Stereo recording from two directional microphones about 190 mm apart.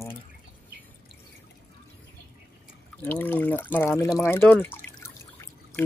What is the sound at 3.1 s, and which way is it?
Speech, 10° left (ahead or behind).